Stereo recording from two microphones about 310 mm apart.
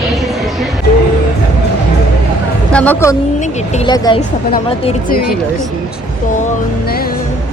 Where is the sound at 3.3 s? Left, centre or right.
Left.